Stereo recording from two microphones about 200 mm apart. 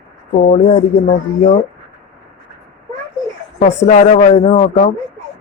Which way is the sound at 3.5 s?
40° left (ahead or behind).